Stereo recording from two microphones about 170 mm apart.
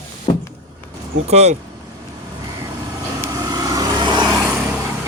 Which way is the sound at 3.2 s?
20° right (ahead or behind).